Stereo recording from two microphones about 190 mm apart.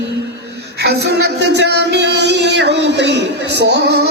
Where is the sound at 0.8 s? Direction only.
60° right (ahead or behind).